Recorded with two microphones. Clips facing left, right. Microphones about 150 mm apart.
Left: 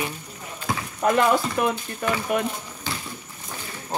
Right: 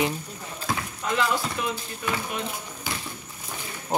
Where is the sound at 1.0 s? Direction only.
55° left (ahead or behind).